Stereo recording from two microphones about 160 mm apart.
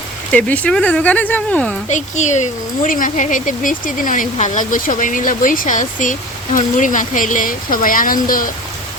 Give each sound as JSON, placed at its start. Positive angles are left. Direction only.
{"t": 0.3, "sound": "speech", "side_deg": 10}
{"t": 1.9, "sound": "speech", "side_deg": 50}